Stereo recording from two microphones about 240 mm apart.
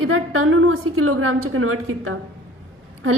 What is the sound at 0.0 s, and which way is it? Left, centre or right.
A woman's voice, right.